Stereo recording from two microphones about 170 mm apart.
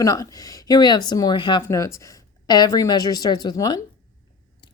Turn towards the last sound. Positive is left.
turn(degrees=25)  # may be behind; listen again after turning